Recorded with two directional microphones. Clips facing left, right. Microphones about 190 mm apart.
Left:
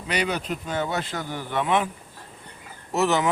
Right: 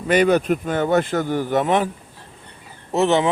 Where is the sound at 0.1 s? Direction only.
50° right (ahead or behind).